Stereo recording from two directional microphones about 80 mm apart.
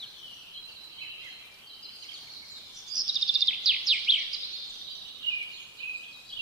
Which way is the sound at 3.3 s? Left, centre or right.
Centre.